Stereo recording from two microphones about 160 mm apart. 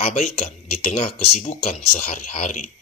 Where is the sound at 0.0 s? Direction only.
50° left (ahead or behind).